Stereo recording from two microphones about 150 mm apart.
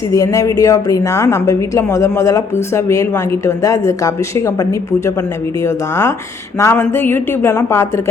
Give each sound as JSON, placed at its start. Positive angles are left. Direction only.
{"t": 0.1, "sound": "a woman's voice", "side_deg": 20}